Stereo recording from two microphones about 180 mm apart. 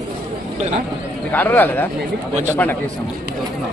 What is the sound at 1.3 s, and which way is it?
Speech, 10° left (ahead or behind).